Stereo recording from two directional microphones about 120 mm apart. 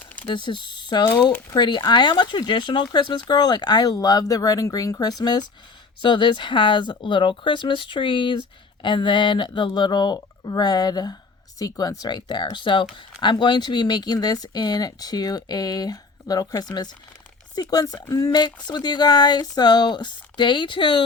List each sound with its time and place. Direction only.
0.3 s speech: 40° left (ahead or behind)